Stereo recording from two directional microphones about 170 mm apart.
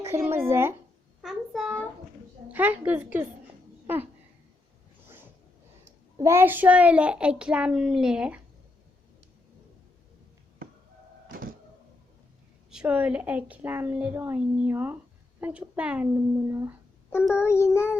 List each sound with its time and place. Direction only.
0.0 s speech: 15° right (ahead or behind)
1.2 s a sound: centre (ahead or behind)
2.5 s a child's voice: 10° right (ahead or behind)
5.8 s a child's voice: 15° right (ahead or behind)
11.3 s a sound: 60° right (ahead or behind)
12.7 s a child's voice: 5° right (ahead or behind)
17.4 s child singing: 15° left (ahead or behind)